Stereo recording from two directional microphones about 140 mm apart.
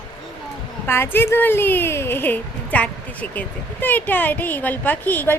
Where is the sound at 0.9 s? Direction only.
15° left (ahead or behind).